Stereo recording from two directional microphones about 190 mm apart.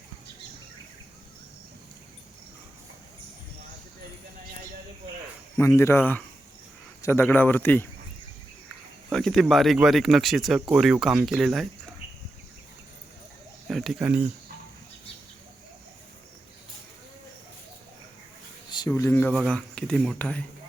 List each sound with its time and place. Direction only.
5.5 s speech: 15° left (ahead or behind)
9.1 s speech: centre (ahead or behind)
13.7 s speech: centre (ahead or behind)
18.7 s speech: 20° left (ahead or behind)
19.3 s speech: centre (ahead or behind)